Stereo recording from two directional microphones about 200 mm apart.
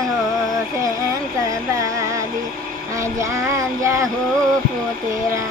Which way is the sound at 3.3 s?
15° right (ahead or behind).